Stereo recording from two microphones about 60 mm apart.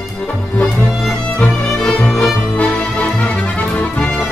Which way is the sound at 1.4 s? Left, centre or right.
Centre.